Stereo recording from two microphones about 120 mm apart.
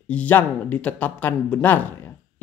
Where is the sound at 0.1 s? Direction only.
15° left (ahead or behind).